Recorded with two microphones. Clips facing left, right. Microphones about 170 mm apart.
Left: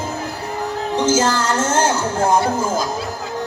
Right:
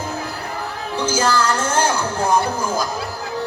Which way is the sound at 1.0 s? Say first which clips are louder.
Left 1 dB; 25° left (ahead or behind).